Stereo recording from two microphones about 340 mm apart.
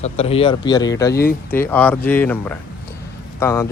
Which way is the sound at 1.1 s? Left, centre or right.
Left.